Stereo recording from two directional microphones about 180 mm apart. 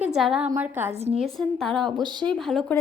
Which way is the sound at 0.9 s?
35° right (ahead or behind).